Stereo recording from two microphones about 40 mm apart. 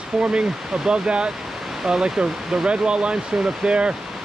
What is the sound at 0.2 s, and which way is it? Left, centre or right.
Speech, right.